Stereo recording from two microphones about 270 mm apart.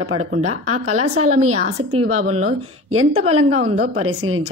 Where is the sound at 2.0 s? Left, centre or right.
Right.